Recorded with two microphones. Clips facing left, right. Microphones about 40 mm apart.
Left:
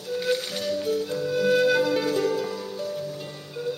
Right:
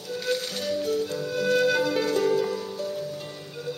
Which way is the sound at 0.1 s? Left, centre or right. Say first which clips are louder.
Left 2 dB; centre.